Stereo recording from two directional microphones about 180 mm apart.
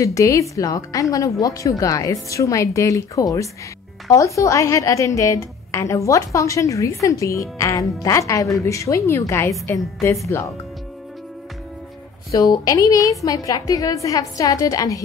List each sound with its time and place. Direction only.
0.0 s a woman's voice: 15° left (ahead or behind)
12.3 s a woman's voice: 20° left (ahead or behind)